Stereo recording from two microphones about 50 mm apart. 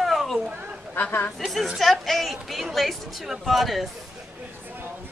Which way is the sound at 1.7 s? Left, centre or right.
Centre.